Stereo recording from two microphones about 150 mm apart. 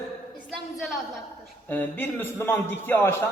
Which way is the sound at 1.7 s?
10° left (ahead or behind).